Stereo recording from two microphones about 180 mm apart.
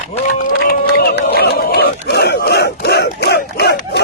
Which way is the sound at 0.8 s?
60° left (ahead or behind).